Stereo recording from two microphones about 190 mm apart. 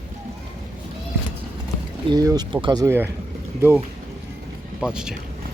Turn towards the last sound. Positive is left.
turn(degrees=-5)  # may be behind; listen again after turning